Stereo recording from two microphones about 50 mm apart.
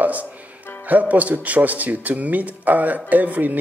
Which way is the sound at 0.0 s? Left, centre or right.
Right.